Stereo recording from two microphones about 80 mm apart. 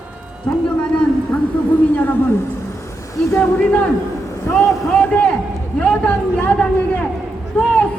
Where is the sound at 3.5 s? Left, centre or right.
Centre.